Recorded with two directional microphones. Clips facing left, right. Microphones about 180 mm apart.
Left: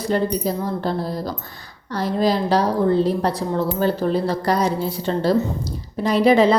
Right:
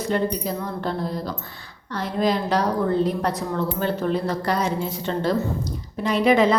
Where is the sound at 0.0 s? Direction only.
35° left (ahead or behind).